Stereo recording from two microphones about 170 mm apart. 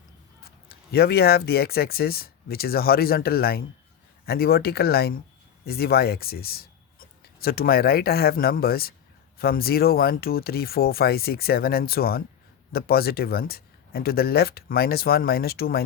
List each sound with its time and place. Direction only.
0.4 s speech: 65° left (ahead or behind)